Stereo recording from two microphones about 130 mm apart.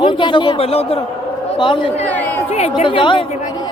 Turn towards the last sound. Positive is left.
turn(degrees=40)  # may be behind; listen again after turning